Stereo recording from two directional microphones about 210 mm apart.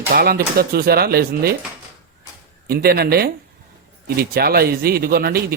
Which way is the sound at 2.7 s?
45° right (ahead or behind).